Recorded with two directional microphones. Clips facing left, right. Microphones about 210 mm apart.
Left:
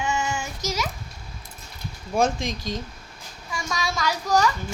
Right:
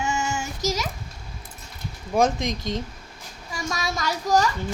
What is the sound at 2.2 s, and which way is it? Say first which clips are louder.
Speech: right 2 dB; 20° right (ahead or behind).